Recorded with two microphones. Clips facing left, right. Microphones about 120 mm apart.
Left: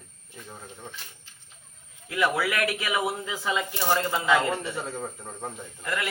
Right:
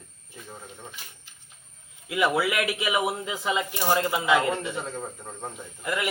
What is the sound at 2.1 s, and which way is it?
Speech, 20° right (ahead or behind).